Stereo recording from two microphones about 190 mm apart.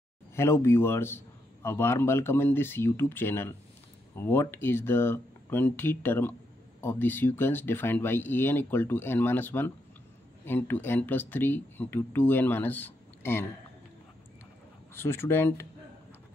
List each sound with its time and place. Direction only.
0.4 s a man's voice: 15° left (ahead or behind)
15.0 s a man's voice: 15° left (ahead or behind)